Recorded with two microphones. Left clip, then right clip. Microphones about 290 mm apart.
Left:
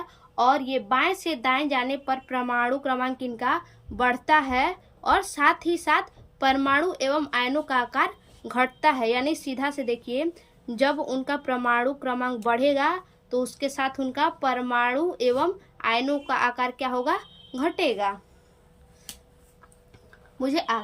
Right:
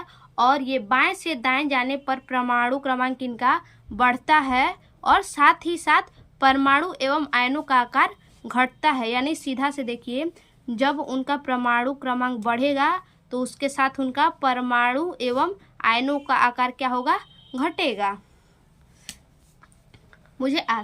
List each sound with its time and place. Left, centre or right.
0.1 s a woman's voice: centre
20.4 s a woman's voice: centre